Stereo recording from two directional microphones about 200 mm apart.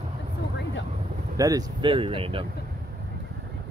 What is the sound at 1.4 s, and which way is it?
Speech, 20° right (ahead or behind).